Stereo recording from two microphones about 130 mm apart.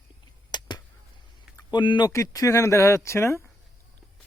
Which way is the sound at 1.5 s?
35° left (ahead or behind).